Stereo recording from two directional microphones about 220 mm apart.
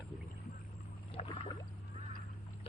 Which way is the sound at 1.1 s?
20° left (ahead or behind).